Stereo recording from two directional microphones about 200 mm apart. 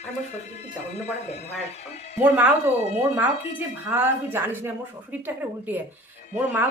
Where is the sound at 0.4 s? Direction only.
35° left (ahead or behind).